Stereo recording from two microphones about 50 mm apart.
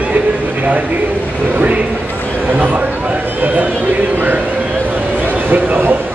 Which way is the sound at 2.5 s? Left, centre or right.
Right.